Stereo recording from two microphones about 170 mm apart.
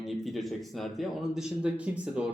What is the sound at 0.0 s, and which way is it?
Speech, centre (ahead or behind).